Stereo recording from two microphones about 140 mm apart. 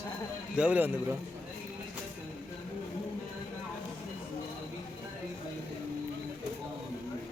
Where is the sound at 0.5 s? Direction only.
10° right (ahead or behind).